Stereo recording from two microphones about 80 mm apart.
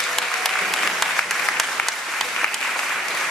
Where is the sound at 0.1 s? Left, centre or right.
Centre.